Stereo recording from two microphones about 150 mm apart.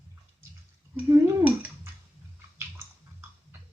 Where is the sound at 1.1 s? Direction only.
15° right (ahead or behind).